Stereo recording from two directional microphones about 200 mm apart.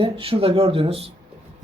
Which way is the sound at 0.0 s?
30° right (ahead or behind).